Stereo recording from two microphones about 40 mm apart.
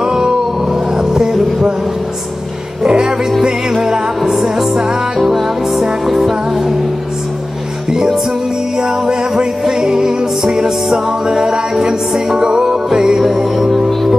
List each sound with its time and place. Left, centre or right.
0.0 s music: centre
0.9 s a sound: centre
2.8 s music: centre
4.2 s music: centre
4.7 s music: centre
5.2 s music: centre
7.9 s music: centre